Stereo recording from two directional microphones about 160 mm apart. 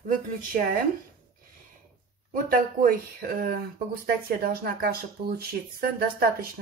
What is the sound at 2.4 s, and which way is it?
Speech, 60° right (ahead or behind).